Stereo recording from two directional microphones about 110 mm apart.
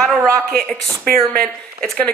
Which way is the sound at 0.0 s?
5° left (ahead or behind).